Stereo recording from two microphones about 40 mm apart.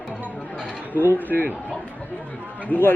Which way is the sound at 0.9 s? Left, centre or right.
Right.